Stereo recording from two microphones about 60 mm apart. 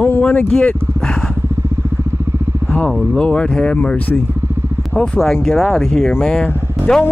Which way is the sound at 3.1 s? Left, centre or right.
Centre.